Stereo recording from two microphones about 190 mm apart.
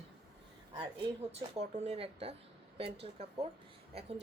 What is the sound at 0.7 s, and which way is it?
A woman's voice, 25° right (ahead or behind).